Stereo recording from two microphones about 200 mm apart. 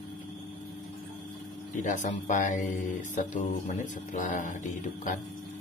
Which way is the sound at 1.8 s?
40° left (ahead or behind).